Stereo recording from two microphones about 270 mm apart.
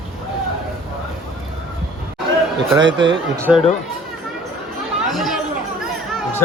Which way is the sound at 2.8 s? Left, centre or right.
Right.